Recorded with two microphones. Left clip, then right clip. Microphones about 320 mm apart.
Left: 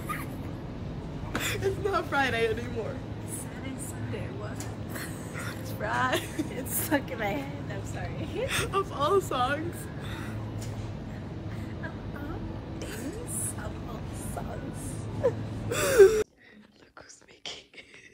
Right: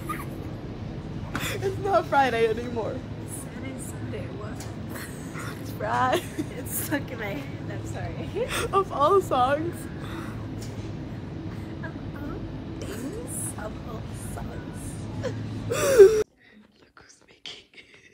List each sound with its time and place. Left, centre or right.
1.4 s speech: centre
5.8 s speech: centre
6.5 s a woman's voice: centre
8.5 s speech: centre
15.7 s gasp: centre